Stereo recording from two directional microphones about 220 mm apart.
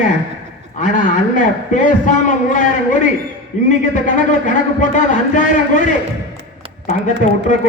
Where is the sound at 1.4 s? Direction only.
35° left (ahead or behind).